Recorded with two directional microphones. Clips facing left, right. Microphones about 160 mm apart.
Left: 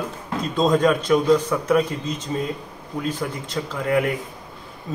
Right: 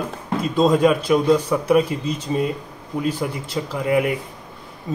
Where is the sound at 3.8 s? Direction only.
10° right (ahead or behind).